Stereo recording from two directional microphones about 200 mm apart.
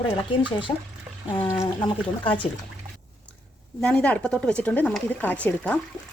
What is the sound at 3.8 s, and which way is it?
A woman's voice, 5° left (ahead or behind).